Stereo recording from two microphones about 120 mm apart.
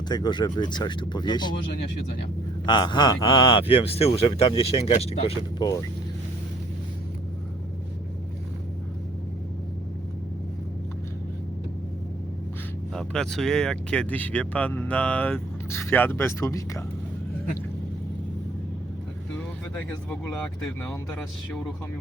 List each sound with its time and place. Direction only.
0.1 s speech: 35° left (ahead or behind)
2.6 s a man's voice: 40° left (ahead or behind); by 5.5 s 60° left (ahead or behind)
5.5 s speech: 30° left (ahead or behind)
12.9 s speech: 5° left (ahead or behind); by 16.8 s 25° left (ahead or behind)
19.7 s speech: 15° left (ahead or behind)